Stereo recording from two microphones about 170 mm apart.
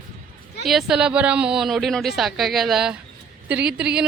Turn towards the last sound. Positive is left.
turn(degrees=-5)  # may be behind; listen again after turning